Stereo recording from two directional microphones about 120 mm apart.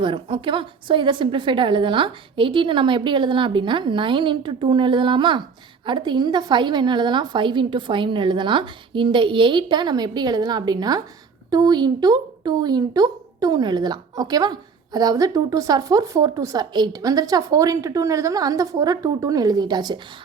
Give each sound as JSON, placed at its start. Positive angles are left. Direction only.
{"t": 0.0, "sound": "a woman's voice", "side_deg": -45}